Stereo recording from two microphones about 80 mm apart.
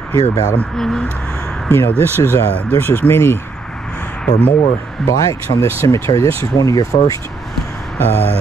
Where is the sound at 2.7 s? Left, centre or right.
Left.